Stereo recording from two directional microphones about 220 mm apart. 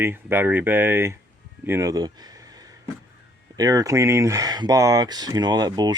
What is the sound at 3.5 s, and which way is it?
Speech, 15° right (ahead or behind).